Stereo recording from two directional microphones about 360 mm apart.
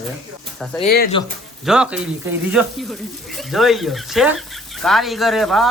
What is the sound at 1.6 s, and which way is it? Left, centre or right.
Speech, centre.